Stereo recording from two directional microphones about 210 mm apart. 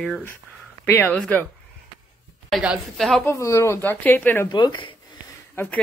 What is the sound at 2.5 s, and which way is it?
Speech, centre (ahead or behind).